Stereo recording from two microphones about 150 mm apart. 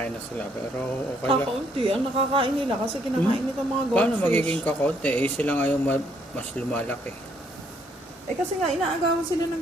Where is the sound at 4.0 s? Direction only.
10° left (ahead or behind).